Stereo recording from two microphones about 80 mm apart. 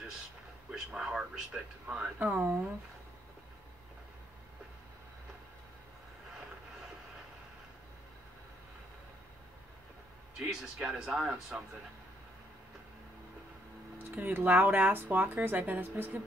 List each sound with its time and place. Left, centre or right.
0.7 s a sound: centre
2.1 s speech: right
10.5 s speech: centre
13.9 s speech: right